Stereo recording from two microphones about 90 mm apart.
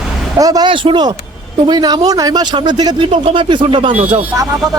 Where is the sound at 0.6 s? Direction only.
70° right (ahead or behind); by 2.9 s 50° right (ahead or behind).